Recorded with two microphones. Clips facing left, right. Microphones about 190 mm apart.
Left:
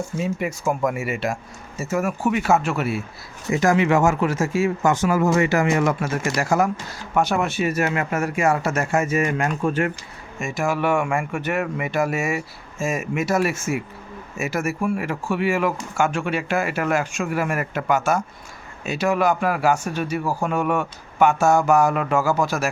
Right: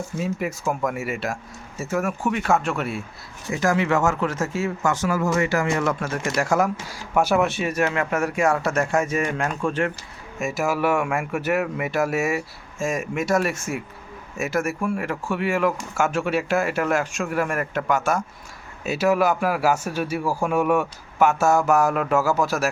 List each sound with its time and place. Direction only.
0.2 s speech: centre (ahead or behind)
3.5 s speech: 20° left (ahead or behind)
6.0 s speech: 5° left (ahead or behind)